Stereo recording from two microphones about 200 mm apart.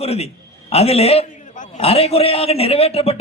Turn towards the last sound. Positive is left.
turn(degrees=30)  # may be behind; listen again after turning